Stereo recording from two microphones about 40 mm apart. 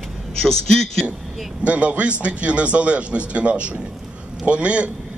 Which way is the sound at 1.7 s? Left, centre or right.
Right.